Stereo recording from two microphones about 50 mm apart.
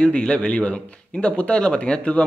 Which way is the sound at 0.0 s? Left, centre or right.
Centre.